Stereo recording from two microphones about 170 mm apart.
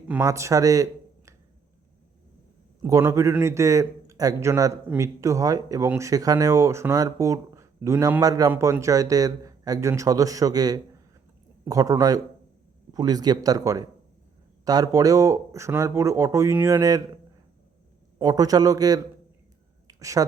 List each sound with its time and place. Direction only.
0.2 s speech: 20° right (ahead or behind)
2.8 s a man's voice: 15° right (ahead or behind)
18.2 s speech: 20° right (ahead or behind)
19.9 s a sound: 20° right (ahead or behind)